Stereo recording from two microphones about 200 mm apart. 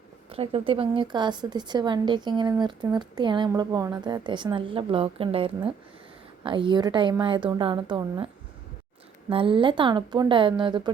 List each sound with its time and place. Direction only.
0.3 s a woman's voice: 30° right (ahead or behind)
9.3 s a woman's voice: 25° right (ahead or behind)